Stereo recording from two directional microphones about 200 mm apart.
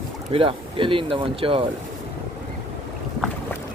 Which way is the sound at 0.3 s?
25° right (ahead or behind).